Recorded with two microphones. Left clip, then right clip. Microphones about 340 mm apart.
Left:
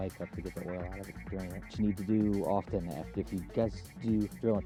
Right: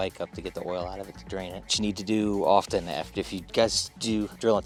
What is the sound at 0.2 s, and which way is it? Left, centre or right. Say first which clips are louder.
Speech: right 8 dB; right.